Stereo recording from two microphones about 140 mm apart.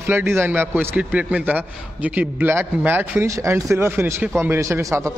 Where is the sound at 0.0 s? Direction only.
15° right (ahead or behind).